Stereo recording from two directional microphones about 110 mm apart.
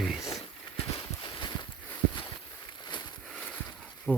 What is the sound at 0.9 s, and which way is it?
Clip-clop, 45° left (ahead or behind).